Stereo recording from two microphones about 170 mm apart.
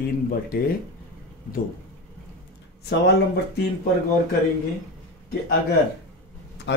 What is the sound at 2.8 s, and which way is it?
Speech, 80° left.